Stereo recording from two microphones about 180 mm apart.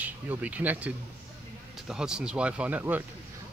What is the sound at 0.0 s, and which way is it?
Speech, 10° right (ahead or behind).